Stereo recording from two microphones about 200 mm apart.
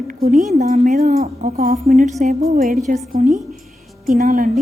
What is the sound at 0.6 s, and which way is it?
A woman's voice, 35° right (ahead or behind).